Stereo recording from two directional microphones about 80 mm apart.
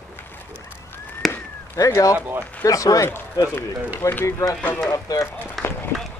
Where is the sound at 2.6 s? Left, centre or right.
Left.